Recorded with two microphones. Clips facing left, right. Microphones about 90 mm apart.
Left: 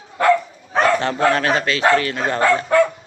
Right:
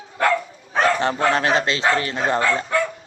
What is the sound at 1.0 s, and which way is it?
A man's voice, 20° right (ahead or behind).